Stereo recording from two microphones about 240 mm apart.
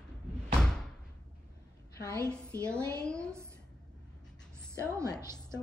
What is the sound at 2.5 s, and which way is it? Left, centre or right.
Speech, centre.